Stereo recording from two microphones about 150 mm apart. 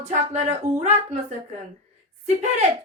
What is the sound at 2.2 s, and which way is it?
Speech, 50° right (ahead or behind).